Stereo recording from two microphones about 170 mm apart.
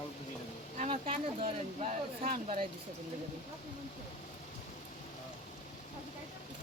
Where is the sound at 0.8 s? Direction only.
40° right (ahead or behind).